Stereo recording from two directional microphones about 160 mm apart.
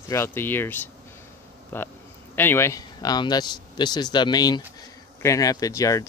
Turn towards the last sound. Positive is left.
turn(degrees=20)  # may be behind; listen again after turning